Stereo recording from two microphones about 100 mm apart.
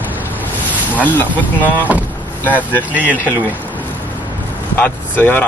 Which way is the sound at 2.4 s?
15° left (ahead or behind).